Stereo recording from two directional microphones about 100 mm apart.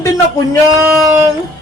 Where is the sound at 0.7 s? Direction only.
30° right (ahead or behind).